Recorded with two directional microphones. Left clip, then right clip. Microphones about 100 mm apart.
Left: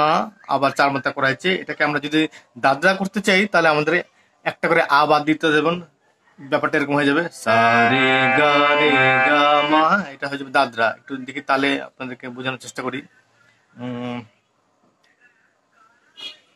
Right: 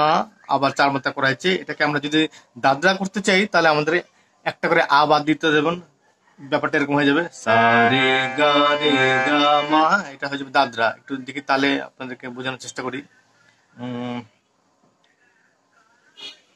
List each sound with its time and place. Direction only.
0.0 s speech: 30° left (ahead or behind)